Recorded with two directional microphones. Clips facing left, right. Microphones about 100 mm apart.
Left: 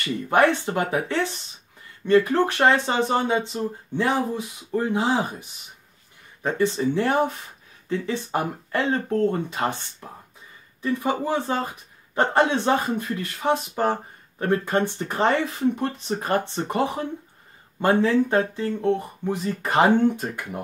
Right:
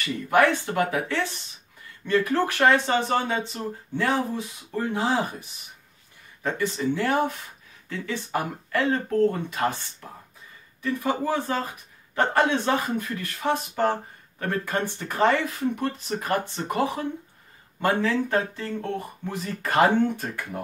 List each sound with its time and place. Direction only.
0.3 s speech: 25° left (ahead or behind)